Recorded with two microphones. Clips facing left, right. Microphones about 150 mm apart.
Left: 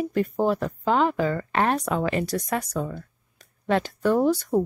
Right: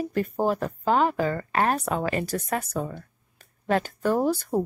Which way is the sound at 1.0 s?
40° right (ahead or behind).